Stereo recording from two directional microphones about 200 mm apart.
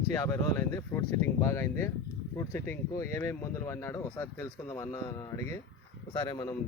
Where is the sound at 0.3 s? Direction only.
10° left (ahead or behind).